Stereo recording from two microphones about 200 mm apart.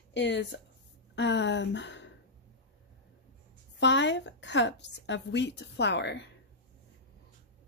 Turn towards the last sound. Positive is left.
turn(degrees=60)  # may be behind; listen again after turning